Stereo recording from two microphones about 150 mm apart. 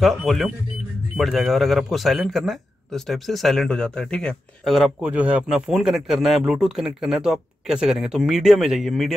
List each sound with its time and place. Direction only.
0.0 s speech: centre (ahead or behind)